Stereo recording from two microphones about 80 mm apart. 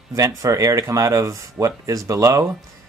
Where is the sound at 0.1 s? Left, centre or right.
Right.